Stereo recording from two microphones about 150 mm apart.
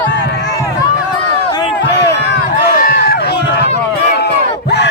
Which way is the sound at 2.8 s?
90° left.